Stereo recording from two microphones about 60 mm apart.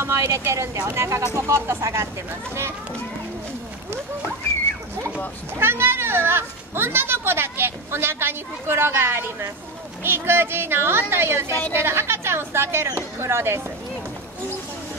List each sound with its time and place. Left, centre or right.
0.0 s speech: right
5.6 s speech: right